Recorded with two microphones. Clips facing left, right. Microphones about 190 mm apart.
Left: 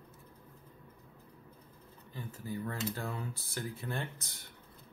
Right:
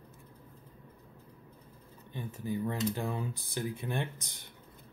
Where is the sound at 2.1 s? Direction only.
20° right (ahead or behind).